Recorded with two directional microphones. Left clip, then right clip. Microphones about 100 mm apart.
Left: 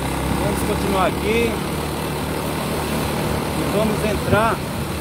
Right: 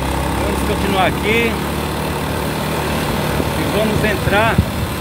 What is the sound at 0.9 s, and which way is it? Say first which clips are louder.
Speech: right 4 dB; 35° left (ahead or behind).